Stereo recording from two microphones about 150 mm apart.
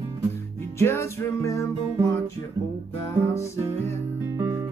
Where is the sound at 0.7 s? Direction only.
15° left (ahead or behind).